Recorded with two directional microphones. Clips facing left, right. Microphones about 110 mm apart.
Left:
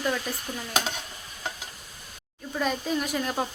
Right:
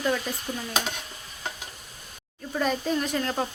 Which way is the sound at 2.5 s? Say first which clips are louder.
Right 2 dB; centre (ahead or behind).